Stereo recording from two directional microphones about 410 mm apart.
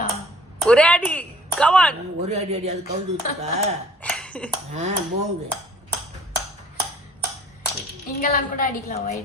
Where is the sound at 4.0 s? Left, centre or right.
Centre.